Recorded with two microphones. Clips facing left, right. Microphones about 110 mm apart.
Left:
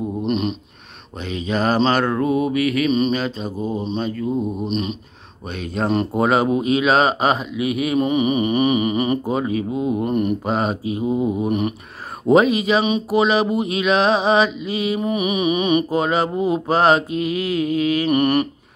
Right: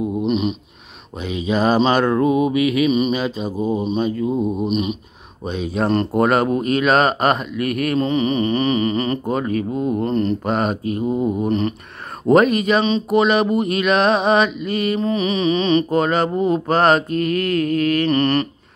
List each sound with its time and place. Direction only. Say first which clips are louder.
0.2 s a sound: right 1 dB; centre (ahead or behind)
1.2 s mantra: right 2 dB; 15° right (ahead or behind)
4.6 s mantra: right 3 dB; 10° right (ahead or behind)
8.0 s speech: left 1 dB; 15° left (ahead or behind)
10.5 s mantra: right 1 dB; centre (ahead or behind)
11.4 s speech: right 1 dB; 15° left (ahead or behind)
12.3 s mantra: right 1 dB; centre (ahead or behind)
12.8 s speech: right 2 dB; 15° left (ahead or behind)
13.2 s mantra: right 1 dB; centre (ahead or behind)
15.0 s mantra: right 1 dB; 15° left (ahead or behind)